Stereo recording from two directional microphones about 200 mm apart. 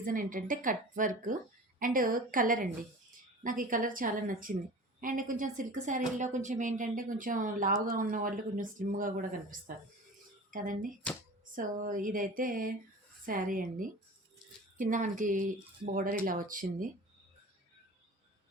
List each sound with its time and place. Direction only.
0.0 s a woman's voice: 40° right (ahead or behind)